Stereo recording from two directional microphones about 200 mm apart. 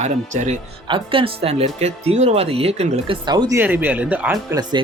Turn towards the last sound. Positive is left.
turn(degrees=-10)  # may be behind; listen again after turning